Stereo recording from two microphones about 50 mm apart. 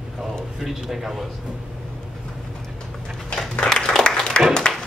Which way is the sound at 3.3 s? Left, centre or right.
Centre.